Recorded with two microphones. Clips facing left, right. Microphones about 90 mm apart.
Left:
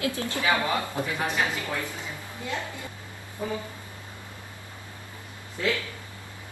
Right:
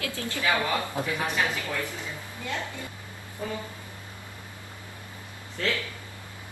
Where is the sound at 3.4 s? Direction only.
15° left (ahead or behind).